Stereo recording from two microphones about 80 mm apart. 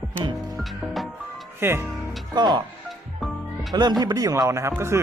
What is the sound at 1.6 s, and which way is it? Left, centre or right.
Speech, right.